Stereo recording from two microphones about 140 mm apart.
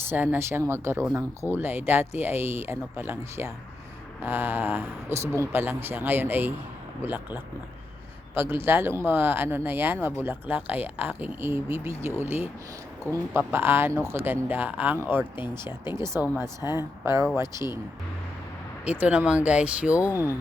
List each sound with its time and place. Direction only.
0.1 s speech: 15° right (ahead or behind)
15.4 s speech: 30° left (ahead or behind)
15.9 s speech: 20° right (ahead or behind)
18.9 s speech: 10° right (ahead or behind)